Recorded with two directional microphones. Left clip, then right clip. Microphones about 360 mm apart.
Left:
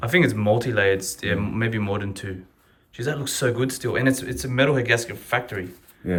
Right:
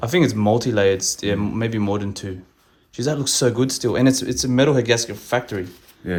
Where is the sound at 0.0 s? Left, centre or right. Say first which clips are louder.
Right 1 dB; centre.